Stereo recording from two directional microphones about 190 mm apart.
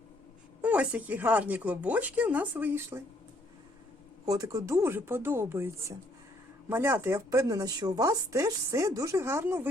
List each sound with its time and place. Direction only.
0.6 s speech: 5° right (ahead or behind)
4.3 s speech: 20° right (ahead or behind)